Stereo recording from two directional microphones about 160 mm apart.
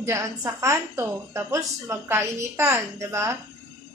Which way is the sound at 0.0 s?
20° right (ahead or behind).